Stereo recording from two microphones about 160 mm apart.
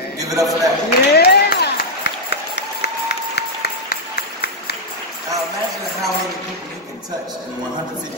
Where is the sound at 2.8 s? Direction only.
90° left.